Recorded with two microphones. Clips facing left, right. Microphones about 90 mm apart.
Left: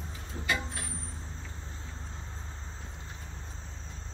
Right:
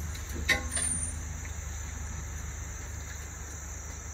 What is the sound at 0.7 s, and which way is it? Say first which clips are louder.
Vehicle: even; 25° right (ahead or behind).